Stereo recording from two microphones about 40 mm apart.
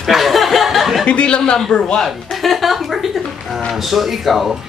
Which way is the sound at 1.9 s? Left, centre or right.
Centre.